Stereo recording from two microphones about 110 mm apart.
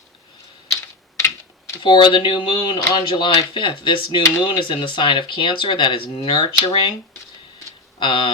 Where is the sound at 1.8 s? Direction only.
45° left (ahead or behind).